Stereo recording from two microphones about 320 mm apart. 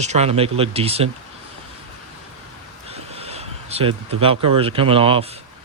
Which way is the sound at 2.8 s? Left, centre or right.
Centre.